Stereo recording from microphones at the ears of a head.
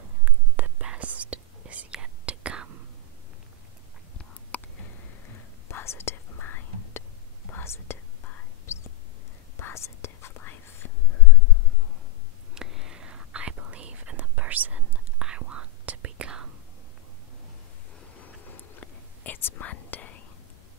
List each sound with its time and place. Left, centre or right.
0.2 s whispering: right
5.7 s whispering: left
12.8 s whispering: right
18.1 s whispering: left